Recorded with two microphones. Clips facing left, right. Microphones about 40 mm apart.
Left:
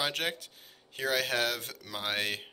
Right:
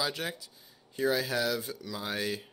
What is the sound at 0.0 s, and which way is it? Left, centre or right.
Speech, left.